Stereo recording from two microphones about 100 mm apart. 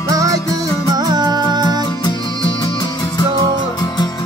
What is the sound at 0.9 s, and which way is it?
Music, 45° right (ahead or behind).